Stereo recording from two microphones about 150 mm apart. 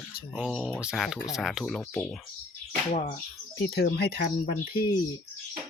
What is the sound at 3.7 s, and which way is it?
Speech, 90° left.